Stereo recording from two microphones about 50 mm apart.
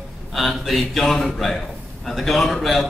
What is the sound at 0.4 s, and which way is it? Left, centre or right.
A man's voice, centre.